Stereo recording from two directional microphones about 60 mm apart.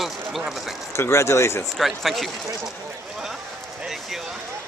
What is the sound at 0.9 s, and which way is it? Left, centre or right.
Speech, left.